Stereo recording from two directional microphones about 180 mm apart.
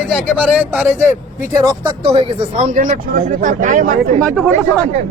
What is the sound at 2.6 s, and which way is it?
Speech, 45° right (ahead or behind).